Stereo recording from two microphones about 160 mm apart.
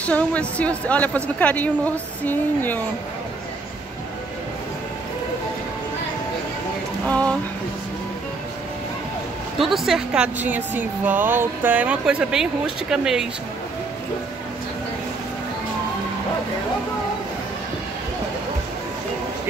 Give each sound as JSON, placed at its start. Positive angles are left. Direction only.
{"t": 0.0, "sound": "a woman's voice", "side_deg": 10}
{"t": 7.1, "sound": "speech", "side_deg": 10}
{"t": 9.6, "sound": "speech", "side_deg": 0}